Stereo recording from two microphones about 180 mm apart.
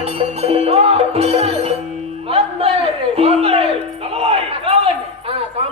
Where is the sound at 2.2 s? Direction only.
30° right (ahead or behind).